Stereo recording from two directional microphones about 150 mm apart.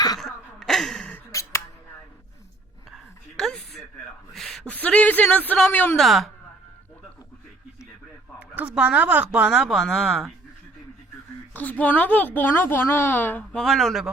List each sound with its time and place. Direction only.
0.2 s wail: centre (ahead or behind)
1.3 s finger snapping: 20° left (ahead or behind)
2.9 s a sound: 5° left (ahead or behind)
4.4 s a man's voice: 5° left (ahead or behind)
6.0 s speech: centre (ahead or behind)
8.4 s speech: 10° right (ahead or behind)
11.5 s a woman's voice: 10° left (ahead or behind)